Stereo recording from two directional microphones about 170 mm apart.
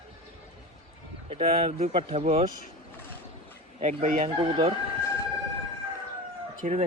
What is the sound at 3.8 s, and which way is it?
Speech, 40° right (ahead or behind).